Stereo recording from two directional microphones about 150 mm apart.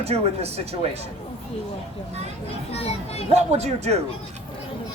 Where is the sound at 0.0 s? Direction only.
45° right (ahead or behind).